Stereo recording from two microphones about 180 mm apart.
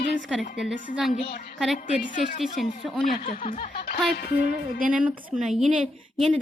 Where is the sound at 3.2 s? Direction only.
35° left (ahead or behind).